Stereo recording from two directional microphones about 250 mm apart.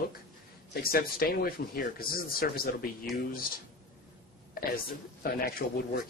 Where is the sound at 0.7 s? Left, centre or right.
Left.